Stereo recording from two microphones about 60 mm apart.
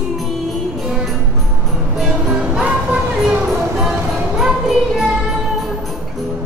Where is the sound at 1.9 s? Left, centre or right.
Centre.